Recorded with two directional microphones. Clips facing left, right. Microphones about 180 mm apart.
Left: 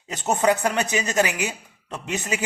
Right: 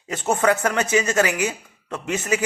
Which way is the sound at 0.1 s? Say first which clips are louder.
Right 1 dB; 20° left (ahead or behind).